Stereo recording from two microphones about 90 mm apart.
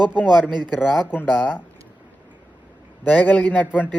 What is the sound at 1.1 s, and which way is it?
Speech, 20° left (ahead or behind).